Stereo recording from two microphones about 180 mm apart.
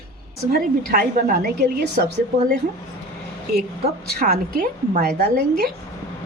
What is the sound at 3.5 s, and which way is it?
A woman's voice, 60° right (ahead or behind).